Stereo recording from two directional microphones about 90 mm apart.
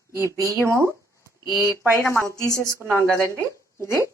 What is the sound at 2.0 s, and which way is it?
Speech, 25° left (ahead or behind).